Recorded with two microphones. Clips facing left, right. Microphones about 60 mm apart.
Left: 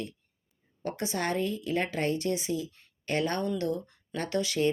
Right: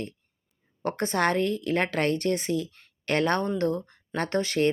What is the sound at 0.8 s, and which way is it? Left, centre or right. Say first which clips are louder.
A woman's voice: right 6 dB; right.